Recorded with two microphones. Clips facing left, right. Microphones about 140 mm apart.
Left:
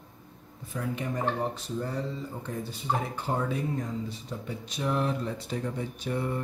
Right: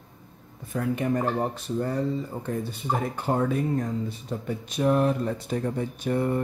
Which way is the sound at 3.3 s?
60° right (ahead or behind).